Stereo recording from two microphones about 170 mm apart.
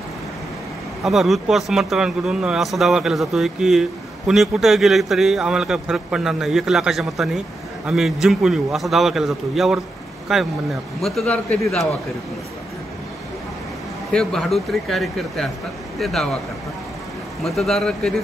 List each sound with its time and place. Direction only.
1.0 s a man's voice: centre (ahead or behind)
14.1 s a man's voice: centre (ahead or behind)
17.4 s a man's voice: centre (ahead or behind)